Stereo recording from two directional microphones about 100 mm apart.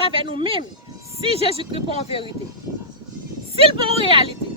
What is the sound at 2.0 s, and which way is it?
Speech, 70° left (ahead or behind).